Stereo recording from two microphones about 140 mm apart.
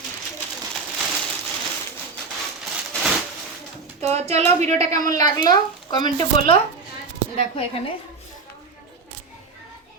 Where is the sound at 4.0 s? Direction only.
50° right (ahead or behind).